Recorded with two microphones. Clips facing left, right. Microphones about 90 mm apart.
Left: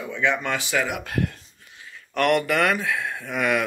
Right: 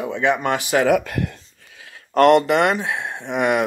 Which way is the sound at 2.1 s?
30° right (ahead or behind).